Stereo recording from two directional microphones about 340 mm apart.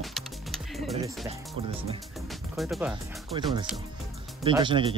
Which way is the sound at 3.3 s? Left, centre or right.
Centre.